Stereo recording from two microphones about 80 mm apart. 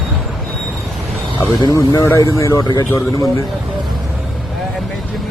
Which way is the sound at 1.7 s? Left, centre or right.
Left.